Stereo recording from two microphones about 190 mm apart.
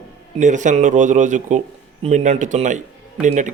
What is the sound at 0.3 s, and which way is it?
Speech, 40° right (ahead or behind).